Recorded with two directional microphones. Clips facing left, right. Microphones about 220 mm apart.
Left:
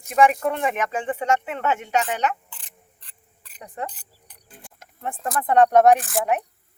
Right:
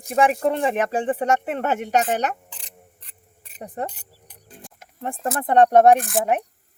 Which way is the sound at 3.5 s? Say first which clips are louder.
Right 3 dB; 45° right (ahead or behind).